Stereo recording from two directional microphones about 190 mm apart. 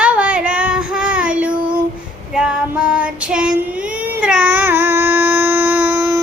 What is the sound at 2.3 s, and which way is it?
Female singing, 5° right (ahead or behind).